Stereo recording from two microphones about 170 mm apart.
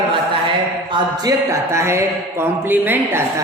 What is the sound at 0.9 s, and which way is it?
Speech, 20° right (ahead or behind).